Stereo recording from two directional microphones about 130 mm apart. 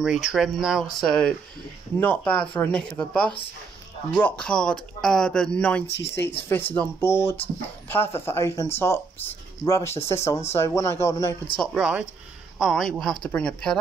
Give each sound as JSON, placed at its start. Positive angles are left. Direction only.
{"t": 0.0, "sound": "speech", "side_deg": -5}
{"t": 11.5, "sound": "speech", "side_deg": 0}